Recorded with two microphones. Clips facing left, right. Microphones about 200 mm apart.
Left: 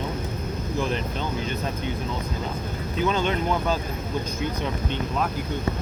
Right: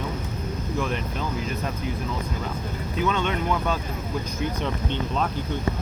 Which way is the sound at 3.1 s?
35° left (ahead or behind).